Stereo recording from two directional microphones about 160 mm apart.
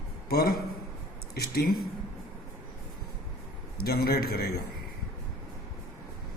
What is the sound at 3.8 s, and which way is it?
Speech, 70° left (ahead or behind).